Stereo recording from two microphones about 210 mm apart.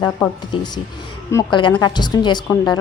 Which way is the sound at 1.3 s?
20° left (ahead or behind).